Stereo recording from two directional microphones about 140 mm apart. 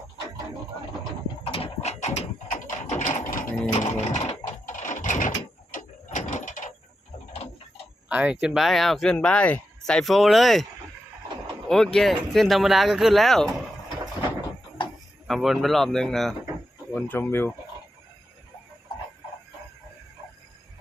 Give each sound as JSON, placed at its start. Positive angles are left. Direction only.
{"t": 1.5, "sound": "mechanisms", "side_deg": 45}
{"t": 3.0, "sound": "a sound", "side_deg": 70}
{"t": 3.7, "sound": "a sound", "side_deg": 55}
{"t": 8.1, "sound": "speech", "side_deg": -10}
{"t": 11.7, "sound": "speech", "side_deg": 5}
{"t": 15.3, "sound": "speech", "side_deg": 0}
{"t": 16.9, "sound": "speech", "side_deg": 15}